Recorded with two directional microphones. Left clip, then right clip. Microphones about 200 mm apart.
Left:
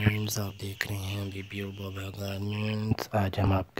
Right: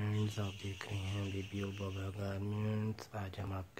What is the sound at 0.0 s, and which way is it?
Speech, 45° left (ahead or behind).